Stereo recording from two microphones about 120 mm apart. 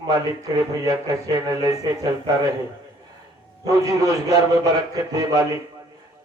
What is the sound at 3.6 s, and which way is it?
A man's voice, 30° right (ahead or behind).